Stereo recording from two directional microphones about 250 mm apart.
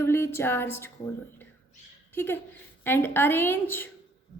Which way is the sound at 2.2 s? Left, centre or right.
Centre.